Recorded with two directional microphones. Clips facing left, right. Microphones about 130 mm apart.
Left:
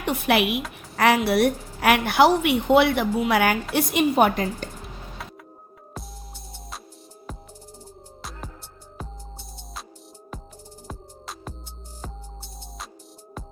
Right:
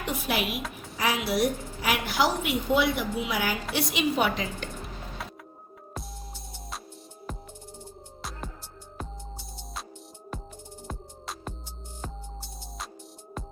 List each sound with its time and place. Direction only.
0.0 s a woman's voice: 65° left (ahead or behind); by 4.7 s 50° left (ahead or behind)
4.8 s music: centre (ahead or behind)
10.8 s music: 5° left (ahead or behind)